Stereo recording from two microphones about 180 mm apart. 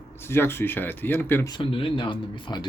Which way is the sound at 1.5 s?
30° left (ahead or behind).